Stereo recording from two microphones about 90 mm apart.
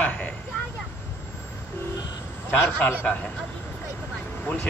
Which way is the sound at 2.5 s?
20° left (ahead or behind).